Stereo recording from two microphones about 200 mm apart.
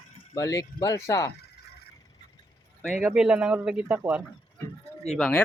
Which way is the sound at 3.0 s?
5° right (ahead or behind).